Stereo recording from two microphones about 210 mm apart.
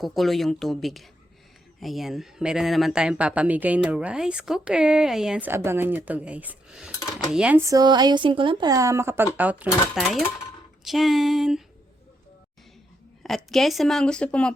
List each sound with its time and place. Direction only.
0.0 s speech: centre (ahead or behind)
13.2 s speech: centre (ahead or behind)